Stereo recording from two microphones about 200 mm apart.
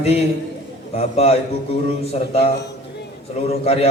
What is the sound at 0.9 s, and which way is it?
Speech, 30° left (ahead or behind).